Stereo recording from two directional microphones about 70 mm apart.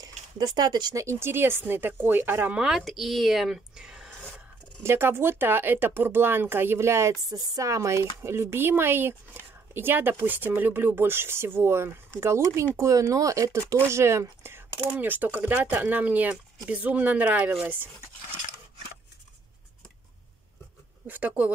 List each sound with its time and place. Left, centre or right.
0.6 s speech: right
0.9 s speech: right
2.5 s speech: centre
2.8 s speech: centre
3.7 s a sound: centre
4.8 s speech: right
7.2 s speech: right
15.0 s speech: right
21.1 s speech: right